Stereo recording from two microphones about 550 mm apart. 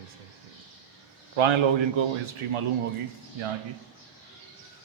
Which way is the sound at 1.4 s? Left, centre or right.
Right.